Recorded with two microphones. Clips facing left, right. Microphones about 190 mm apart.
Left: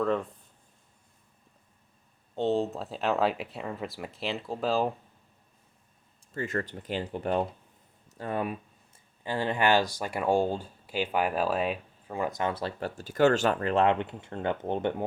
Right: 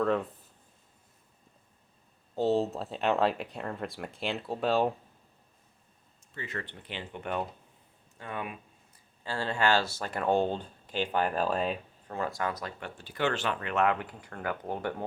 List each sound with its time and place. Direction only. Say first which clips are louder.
0.0 s speech: even; centre (ahead or behind)
2.3 s speech: even; 5° right (ahead or behind)
6.3 s speech: left 8 dB; 45° left (ahead or behind)
9.2 s speech: left 2 dB; 15° left (ahead or behind)